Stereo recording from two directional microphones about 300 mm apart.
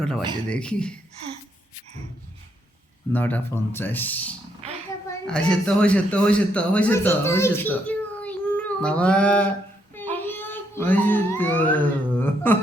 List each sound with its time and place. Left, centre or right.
0.5 s speech: centre
3.1 s a man's voice: centre